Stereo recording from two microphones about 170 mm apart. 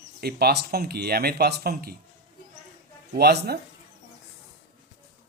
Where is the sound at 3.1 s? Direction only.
70° right (ahead or behind).